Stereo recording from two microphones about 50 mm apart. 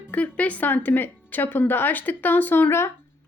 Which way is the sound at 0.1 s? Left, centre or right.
Left.